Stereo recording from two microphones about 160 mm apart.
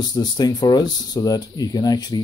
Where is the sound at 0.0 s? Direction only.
25° left (ahead or behind).